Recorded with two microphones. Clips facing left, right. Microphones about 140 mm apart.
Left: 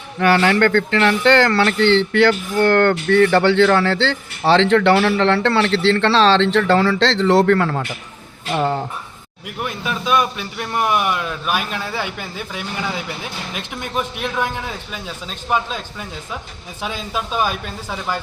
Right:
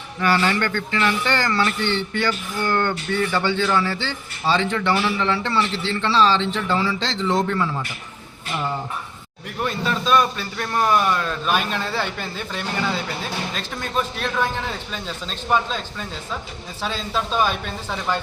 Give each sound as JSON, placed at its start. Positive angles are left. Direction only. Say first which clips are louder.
{"t": 0.2, "sound": "speech", "louder": "left 6 dB", "side_deg": 60}
{"t": 2.6, "sound": "speech", "louder": "left 8 dB", "side_deg": 60}
{"t": 9.6, "sound": "speech", "louder": "right 1 dB", "side_deg": 10}